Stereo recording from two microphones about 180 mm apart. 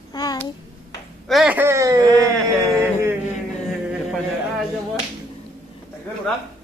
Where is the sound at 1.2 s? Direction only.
Centre (ahead or behind).